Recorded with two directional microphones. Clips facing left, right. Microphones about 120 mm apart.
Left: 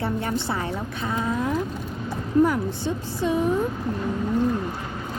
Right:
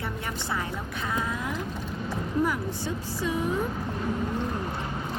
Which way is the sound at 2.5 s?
25° left (ahead or behind).